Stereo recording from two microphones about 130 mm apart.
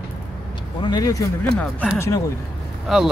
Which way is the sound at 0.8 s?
30° left (ahead or behind).